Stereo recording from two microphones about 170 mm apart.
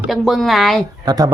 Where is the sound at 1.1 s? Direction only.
20° right (ahead or behind).